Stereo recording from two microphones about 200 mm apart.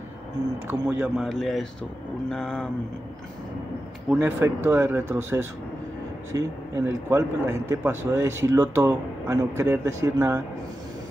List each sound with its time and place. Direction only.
0.7 s speech: 5° right (ahead or behind)
4.1 s speech: 10° right (ahead or behind)